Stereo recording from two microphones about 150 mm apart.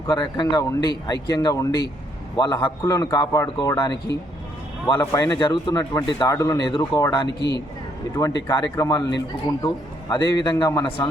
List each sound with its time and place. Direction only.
0.1 s speech: 30° left (ahead or behind)